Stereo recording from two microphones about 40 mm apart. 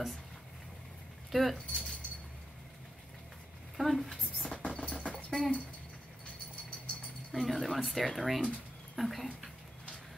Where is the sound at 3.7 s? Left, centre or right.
Centre.